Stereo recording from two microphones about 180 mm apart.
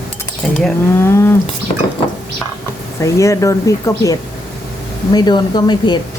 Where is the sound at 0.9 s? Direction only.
15° left (ahead or behind).